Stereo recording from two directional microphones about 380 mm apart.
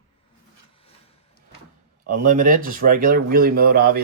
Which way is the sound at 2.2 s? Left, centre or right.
Right.